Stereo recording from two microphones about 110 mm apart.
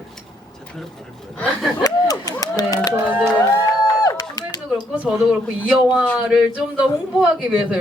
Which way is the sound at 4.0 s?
35° left (ahead or behind).